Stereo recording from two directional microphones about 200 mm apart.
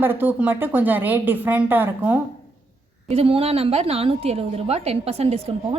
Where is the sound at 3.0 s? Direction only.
30° right (ahead or behind).